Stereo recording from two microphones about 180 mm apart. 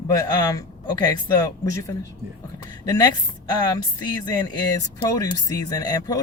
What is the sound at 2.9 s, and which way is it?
Speech, 20° left (ahead or behind).